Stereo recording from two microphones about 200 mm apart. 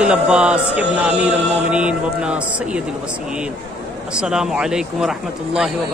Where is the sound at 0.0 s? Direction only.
5° right (ahead or behind).